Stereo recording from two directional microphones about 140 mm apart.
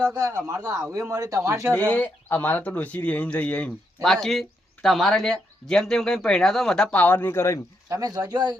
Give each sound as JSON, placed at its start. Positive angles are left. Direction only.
{"t": 0.0, "sound": "a man's voice", "side_deg": -25}
{"t": 1.7, "sound": "speech", "side_deg": 10}
{"t": 7.9, "sound": "a man's voice", "side_deg": -25}